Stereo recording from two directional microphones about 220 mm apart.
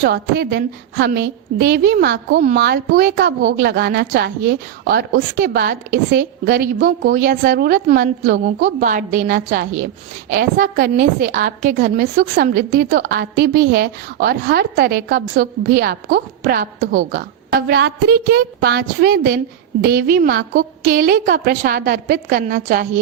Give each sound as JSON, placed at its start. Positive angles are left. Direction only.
{"t": 0.0, "sound": "a woman's voice", "side_deg": -45}